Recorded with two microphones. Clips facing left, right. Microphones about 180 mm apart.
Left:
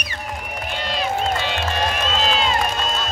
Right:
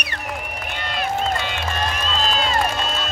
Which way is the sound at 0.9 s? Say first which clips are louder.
Even; 55° right (ahead or behind).